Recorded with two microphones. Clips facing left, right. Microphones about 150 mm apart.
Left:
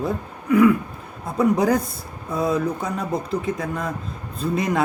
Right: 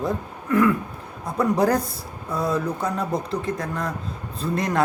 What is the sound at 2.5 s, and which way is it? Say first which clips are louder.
Speech: left 1 dB; centre (ahead or behind).